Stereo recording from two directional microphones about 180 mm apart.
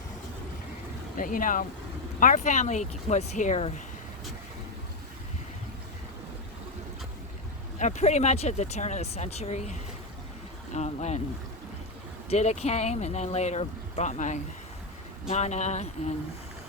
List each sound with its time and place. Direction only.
1.1 s speech: 50° left (ahead or behind)
7.8 s speech: 40° left (ahead or behind)
12.3 s speech: 35° left (ahead or behind)